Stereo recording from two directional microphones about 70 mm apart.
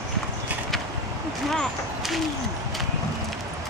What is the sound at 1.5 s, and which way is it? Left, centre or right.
Speech, centre.